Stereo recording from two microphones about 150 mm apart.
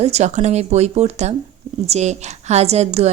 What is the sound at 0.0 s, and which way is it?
A woman's voice, 50° right (ahead or behind).